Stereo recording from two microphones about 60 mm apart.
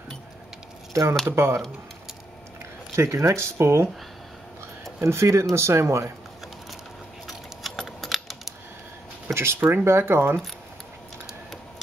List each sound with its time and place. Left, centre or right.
1.3 s speech: right
3.0 s speech: right
5.0 s speech: right
7.2 s keys jangling: centre
7.8 s typing: centre
9.3 s speech: right